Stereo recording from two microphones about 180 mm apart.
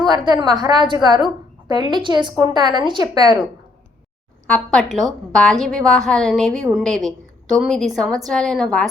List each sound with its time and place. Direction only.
0.1 s a woman's voice: 25° right (ahead or behind)
4.4 s a woman's voice: 5° left (ahead or behind)